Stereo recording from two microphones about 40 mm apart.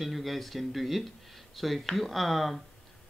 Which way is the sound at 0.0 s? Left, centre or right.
Centre.